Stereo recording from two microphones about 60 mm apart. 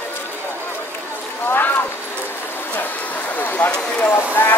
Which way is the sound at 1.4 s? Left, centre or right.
Left.